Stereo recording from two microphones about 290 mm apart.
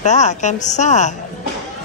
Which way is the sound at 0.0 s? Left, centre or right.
Left.